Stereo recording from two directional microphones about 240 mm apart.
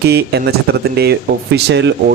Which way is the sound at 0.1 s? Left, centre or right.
Right.